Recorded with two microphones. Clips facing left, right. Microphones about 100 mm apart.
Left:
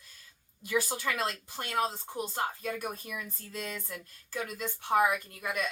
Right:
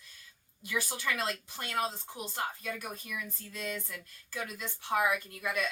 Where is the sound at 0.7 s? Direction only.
30° left (ahead or behind).